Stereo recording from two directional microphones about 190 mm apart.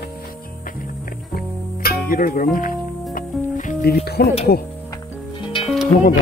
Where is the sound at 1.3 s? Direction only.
50° left (ahead or behind).